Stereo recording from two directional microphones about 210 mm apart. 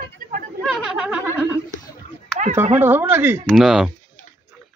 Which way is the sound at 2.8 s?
10° right (ahead or behind).